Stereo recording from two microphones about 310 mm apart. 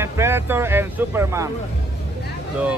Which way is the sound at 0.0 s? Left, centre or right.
Centre.